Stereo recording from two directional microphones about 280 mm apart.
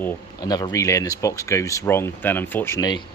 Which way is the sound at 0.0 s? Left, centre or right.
Centre.